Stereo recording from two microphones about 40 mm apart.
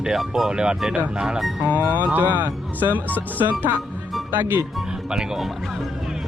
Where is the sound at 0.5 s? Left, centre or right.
Centre.